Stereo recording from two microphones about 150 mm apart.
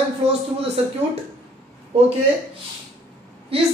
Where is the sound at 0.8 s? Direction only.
45° right (ahead or behind).